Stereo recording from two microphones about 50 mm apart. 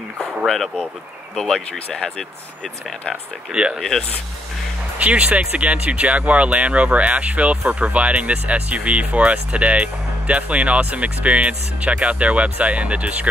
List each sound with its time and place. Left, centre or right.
1.3 s speech: centre
3.5 s speech: centre
4.9 s speech: right